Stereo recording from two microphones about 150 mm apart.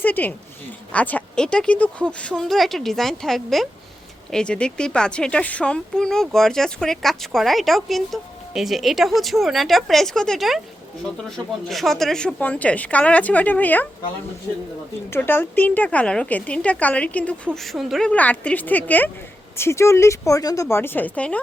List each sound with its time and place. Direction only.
0.0 s a woman's voice: 10° left (ahead or behind)
15.1 s a woman's voice: 15° left (ahead or behind)